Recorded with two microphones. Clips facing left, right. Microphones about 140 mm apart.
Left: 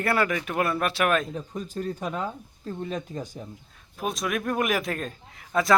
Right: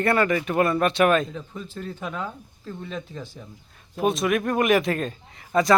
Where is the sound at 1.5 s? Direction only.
40° left (ahead or behind).